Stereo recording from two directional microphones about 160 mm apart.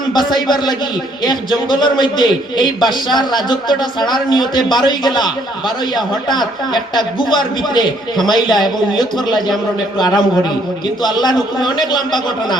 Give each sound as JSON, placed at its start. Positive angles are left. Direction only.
{"t": 0.1, "sound": "a man's voice", "side_deg": 25}
{"t": 1.7, "sound": "a man's voice", "side_deg": 30}
{"t": 9.1, "sound": "a man's voice", "side_deg": 0}
{"t": 10.0, "sound": "a man's voice", "side_deg": 25}